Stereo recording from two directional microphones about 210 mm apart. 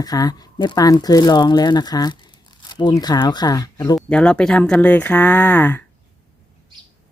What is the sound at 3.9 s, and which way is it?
Speech, 5° left (ahead or behind).